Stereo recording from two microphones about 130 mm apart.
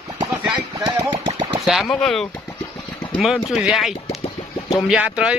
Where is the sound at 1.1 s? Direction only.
40° right (ahead or behind).